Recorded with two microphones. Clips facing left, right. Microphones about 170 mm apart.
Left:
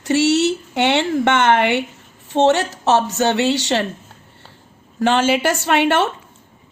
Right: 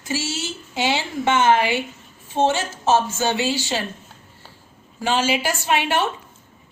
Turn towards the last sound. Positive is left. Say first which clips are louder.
# left 5 dB
turn(degrees=65)  # may be behind; listen again after turning